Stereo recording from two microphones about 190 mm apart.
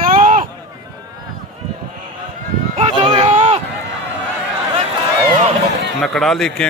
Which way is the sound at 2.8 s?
30° right (ahead or behind).